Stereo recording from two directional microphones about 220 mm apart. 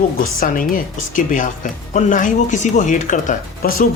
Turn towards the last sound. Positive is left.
turn(degrees=35)  # may be behind; listen again after turning